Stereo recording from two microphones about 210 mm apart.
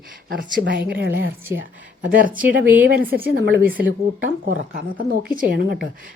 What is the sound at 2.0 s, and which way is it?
Speech, 40° right (ahead or behind).